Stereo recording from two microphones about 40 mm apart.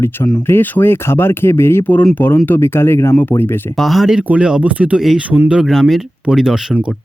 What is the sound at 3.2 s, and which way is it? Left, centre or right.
Speech, left.